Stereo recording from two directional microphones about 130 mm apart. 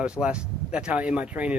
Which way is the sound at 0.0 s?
10° right (ahead or behind).